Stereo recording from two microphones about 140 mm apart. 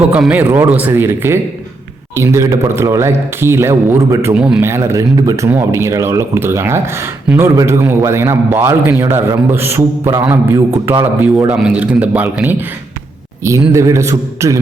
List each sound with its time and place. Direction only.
0.1 s a man's voice: 10° right (ahead or behind)
4.4 s a man's voice: 5° right (ahead or behind)
4.6 s a man's voice: 20° right (ahead or behind)